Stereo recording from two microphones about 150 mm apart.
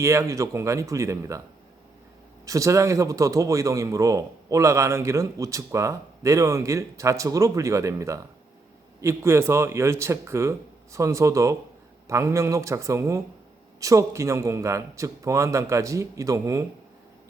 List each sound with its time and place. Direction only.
0.0 s speech: 20° right (ahead or behind)
2.5 s speech: 20° right (ahead or behind)